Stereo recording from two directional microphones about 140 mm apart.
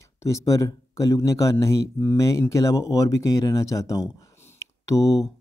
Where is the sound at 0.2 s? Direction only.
20° left (ahead or behind).